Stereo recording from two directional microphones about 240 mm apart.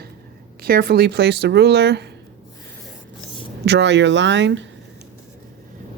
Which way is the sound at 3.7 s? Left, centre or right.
Right.